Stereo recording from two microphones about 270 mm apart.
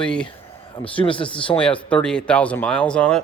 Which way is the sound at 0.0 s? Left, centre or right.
Centre.